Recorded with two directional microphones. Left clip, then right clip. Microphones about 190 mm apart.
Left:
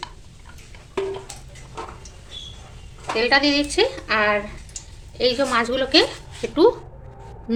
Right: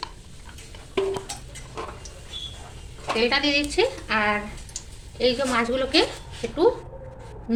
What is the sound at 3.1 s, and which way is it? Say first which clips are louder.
A woman's voice: left 4 dB; 40° left (ahead or behind).